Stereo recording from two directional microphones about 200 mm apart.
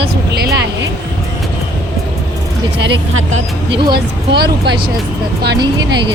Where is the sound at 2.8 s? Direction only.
60° right (ahead or behind).